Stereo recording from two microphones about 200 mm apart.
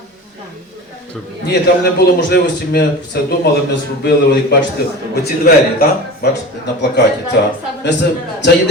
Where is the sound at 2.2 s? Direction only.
60° left (ahead or behind).